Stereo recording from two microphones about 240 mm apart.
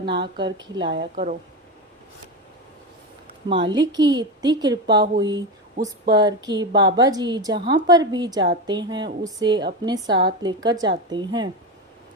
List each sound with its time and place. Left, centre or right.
0.1 s a woman's voice: right
0.4 s a woman's voice: centre
1.1 s a woman's voice: right
3.5 s a woman's voice: right